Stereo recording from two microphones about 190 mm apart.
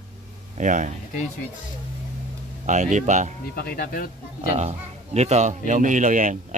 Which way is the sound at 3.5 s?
50° left (ahead or behind).